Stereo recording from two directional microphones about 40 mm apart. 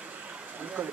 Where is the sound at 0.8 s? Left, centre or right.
Right.